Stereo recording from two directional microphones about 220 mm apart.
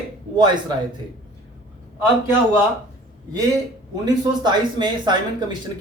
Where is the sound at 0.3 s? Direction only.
20° right (ahead or behind).